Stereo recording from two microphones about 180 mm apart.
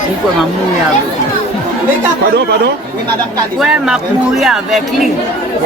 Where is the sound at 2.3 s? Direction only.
65° right (ahead or behind).